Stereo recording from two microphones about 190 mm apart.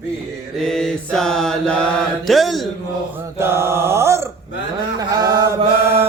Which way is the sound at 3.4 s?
15° right (ahead or behind).